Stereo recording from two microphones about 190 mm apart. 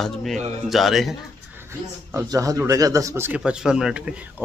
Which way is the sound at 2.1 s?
15° right (ahead or behind).